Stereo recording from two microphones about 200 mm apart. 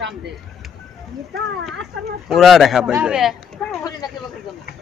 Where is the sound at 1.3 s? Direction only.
55° right (ahead or behind).